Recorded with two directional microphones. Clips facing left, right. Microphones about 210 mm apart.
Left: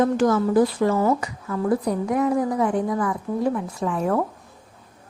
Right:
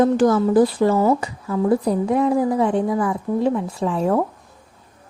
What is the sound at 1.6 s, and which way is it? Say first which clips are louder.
A woman's voice: right 4 dB; 25° right (ahead or behind).